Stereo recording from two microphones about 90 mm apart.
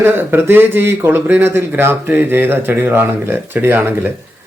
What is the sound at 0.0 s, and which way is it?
Speech, 25° right (ahead or behind).